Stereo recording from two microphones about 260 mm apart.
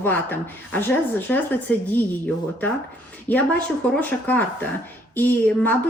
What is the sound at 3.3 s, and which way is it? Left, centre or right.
A woman's voice, centre.